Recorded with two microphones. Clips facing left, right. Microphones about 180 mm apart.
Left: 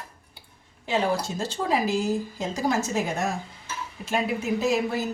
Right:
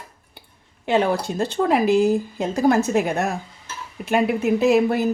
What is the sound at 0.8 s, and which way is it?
Speech, 60° right (ahead or behind).